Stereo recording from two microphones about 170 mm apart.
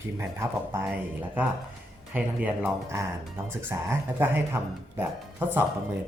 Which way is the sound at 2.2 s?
10° right (ahead or behind).